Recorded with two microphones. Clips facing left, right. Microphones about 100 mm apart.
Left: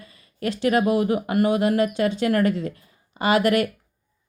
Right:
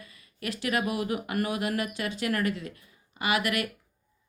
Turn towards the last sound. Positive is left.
turn(degrees=30)  # may be behind; listen again after turning